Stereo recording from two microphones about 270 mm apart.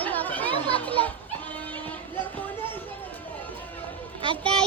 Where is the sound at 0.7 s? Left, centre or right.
Centre.